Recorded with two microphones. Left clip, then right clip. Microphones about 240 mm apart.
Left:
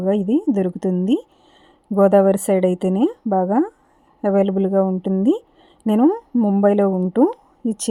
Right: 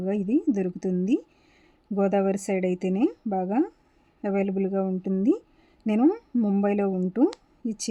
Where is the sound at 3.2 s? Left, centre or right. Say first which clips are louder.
Left 8 dB; centre.